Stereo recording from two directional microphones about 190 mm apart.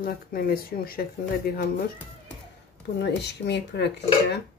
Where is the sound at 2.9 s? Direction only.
65° left (ahead or behind).